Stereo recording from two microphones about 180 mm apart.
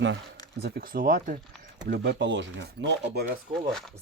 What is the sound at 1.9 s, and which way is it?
Speech, 65° right (ahead or behind).